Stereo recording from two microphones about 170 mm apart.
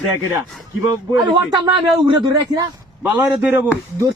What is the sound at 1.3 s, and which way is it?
A man's voice, 25° right (ahead or behind).